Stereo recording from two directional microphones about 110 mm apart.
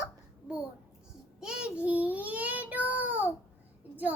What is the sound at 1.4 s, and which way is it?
Child singing, 10° right (ahead or behind).